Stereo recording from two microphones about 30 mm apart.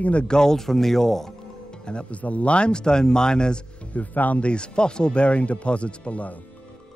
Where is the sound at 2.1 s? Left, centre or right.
Left.